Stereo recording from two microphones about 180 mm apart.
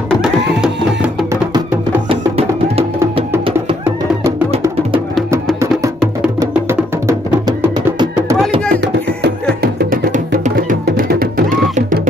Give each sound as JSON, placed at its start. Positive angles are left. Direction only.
{"t": 0.6, "sound": "music", "side_deg": -5}
{"t": 2.0, "sound": "music", "side_deg": -35}
{"t": 6.4, "sound": "music", "side_deg": -15}
{"t": 9.6, "sound": "music", "side_deg": -55}